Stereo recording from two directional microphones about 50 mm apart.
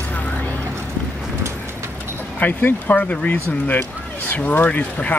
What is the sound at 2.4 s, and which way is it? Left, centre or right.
Speech, left.